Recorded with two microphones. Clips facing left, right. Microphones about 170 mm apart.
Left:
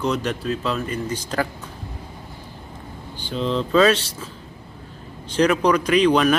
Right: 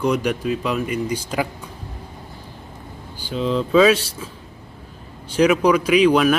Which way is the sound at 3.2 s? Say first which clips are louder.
Right 2 dB; 5° right (ahead or behind).